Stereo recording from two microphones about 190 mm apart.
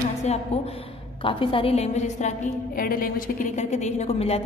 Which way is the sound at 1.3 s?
30° left (ahead or behind).